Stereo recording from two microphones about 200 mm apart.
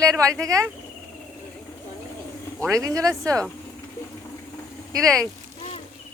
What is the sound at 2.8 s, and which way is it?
Speech, 15° right (ahead or behind).